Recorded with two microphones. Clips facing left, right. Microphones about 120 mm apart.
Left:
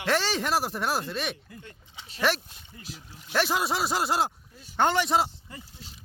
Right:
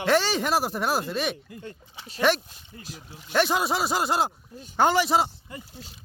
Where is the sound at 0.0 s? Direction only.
Centre (ahead or behind).